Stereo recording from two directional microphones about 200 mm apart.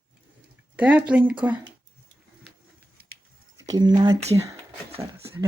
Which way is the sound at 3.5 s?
20° right (ahead or behind).